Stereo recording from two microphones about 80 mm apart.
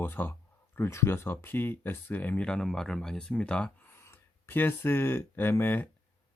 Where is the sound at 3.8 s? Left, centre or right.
Left.